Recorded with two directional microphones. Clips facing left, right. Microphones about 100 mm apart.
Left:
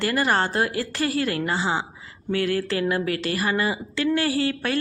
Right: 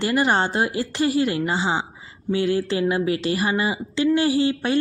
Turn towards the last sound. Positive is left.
turn(degrees=-20)  # may be behind; listen again after turning